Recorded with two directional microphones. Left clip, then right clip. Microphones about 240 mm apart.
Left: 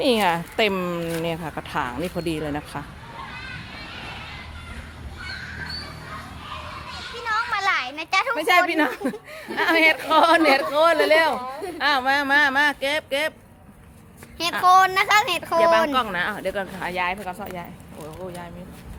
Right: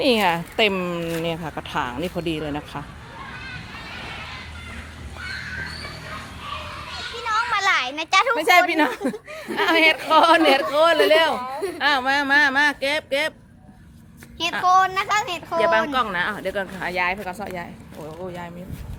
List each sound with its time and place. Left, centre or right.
0.0 s speech: centre
7.3 s a sound: centre
8.4 s a woman's voice: centre
14.6 s a woman's voice: left
15.9 s speech: centre